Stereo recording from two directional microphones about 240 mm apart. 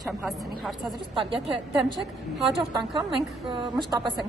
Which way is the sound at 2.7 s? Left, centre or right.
Centre.